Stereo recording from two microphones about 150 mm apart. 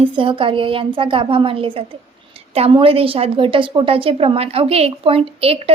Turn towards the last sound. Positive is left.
turn(degrees=-40)  # may be behind; listen again after turning